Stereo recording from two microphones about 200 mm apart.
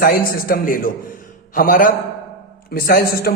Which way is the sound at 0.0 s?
45° left (ahead or behind).